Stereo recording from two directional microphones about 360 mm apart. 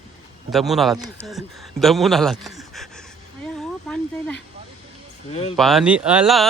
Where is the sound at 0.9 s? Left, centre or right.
Centre.